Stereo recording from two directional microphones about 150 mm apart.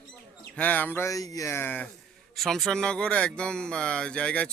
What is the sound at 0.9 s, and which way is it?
Speech, 20° left (ahead or behind).